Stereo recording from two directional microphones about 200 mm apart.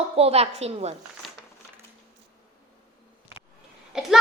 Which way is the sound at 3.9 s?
5° right (ahead or behind).